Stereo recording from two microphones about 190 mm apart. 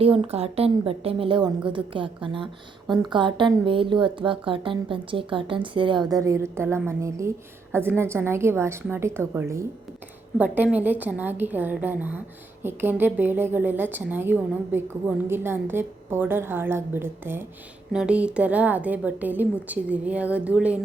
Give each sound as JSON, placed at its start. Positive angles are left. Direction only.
{"t": 0.0, "sound": "a woman's voice", "side_deg": -30}